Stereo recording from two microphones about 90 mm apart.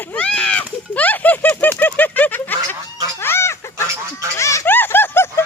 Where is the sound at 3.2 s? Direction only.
30° left (ahead or behind).